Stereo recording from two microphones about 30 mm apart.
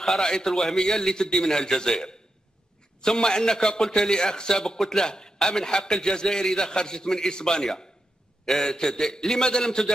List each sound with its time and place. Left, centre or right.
0.2 s a man's voice: left